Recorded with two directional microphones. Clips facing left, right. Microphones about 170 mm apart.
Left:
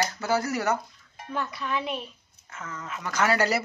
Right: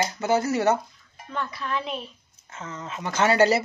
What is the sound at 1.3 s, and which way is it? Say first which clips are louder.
Speech: even; centre (ahead or behind).